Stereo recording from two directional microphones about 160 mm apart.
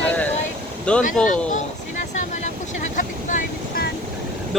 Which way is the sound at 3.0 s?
55° left (ahead or behind).